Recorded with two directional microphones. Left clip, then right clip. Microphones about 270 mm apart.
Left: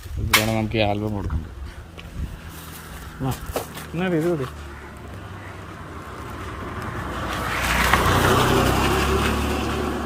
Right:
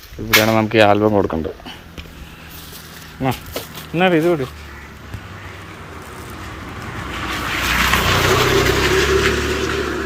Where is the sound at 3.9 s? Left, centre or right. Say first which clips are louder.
Right 10 dB; centre.